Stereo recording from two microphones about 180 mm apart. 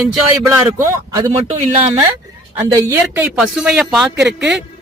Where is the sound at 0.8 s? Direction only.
15° right (ahead or behind).